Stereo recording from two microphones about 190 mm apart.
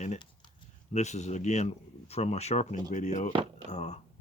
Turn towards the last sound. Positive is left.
turn(degrees=35)  # may be behind; listen again after turning